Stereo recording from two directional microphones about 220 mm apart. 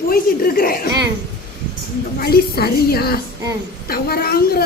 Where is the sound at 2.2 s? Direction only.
45° left (ahead or behind).